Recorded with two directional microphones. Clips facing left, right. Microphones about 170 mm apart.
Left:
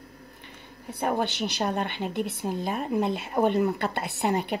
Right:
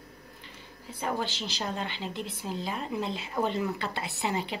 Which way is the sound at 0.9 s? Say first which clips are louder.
Left 5 dB; 55° left (ahead or behind).